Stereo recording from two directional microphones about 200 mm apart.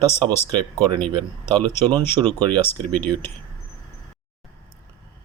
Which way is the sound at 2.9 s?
10° left (ahead or behind).